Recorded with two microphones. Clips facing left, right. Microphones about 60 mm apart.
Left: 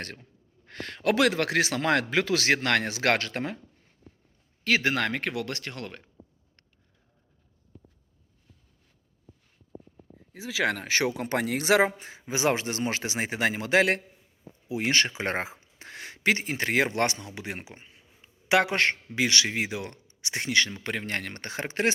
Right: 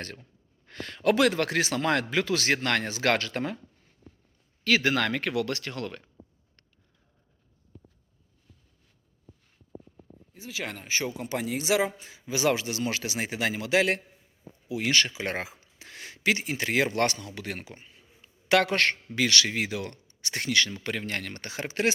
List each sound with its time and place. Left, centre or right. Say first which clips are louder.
0.7 s speech: right 1 dB; left
4.6 s speech: right 1 dB; left
10.3 s speech: left 8 dB; left
11.9 s speech: left 1 dB; left